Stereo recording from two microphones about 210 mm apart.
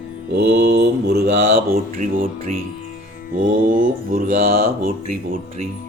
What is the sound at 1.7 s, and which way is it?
Speech, 40° right (ahead or behind).